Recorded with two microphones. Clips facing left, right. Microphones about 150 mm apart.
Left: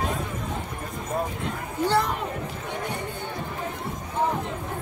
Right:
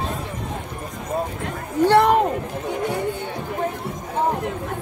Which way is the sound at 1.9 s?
70° right (ahead or behind).